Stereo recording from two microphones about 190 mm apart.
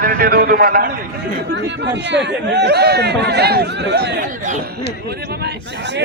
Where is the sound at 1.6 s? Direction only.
65° right (ahead or behind).